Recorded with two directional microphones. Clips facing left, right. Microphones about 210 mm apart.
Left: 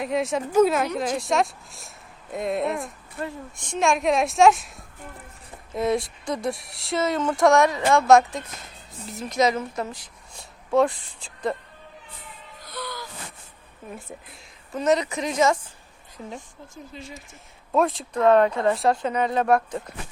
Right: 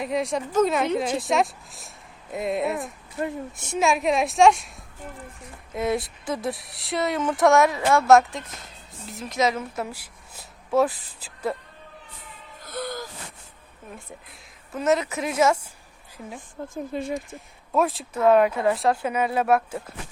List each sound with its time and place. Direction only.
0.0 s speech: centre (ahead or behind)
5.7 s speech: centre (ahead or behind)
12.6 s music: 50° right (ahead or behind)
13.9 s speech: centre (ahead or behind)
16.7 s speech: 55° right (ahead or behind)
17.7 s speech: 5° right (ahead or behind)